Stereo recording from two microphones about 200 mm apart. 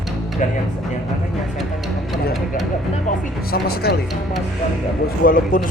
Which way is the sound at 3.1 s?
50° left (ahead or behind).